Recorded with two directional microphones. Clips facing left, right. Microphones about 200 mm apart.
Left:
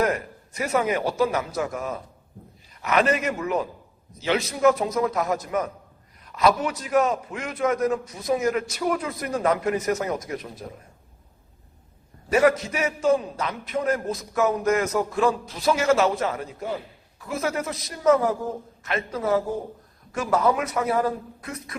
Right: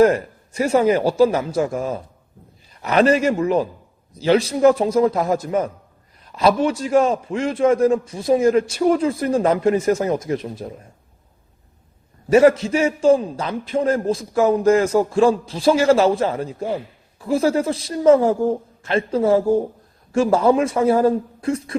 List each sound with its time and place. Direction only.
0.0 s a man's voice: 30° right (ahead or behind)
12.3 s a man's voice: 25° right (ahead or behind)